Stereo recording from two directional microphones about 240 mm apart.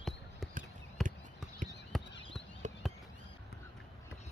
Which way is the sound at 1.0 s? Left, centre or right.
Centre.